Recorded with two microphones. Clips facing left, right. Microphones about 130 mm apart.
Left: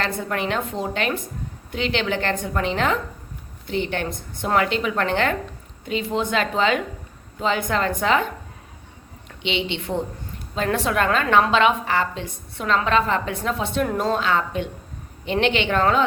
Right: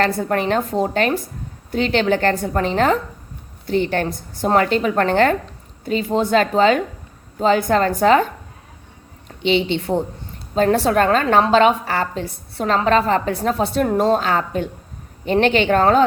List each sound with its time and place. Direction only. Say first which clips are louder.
0.0 s a woman's voice: right 6 dB; 40° right (ahead or behind)
9.4 s a woman's voice: right 8 dB; 40° right (ahead or behind)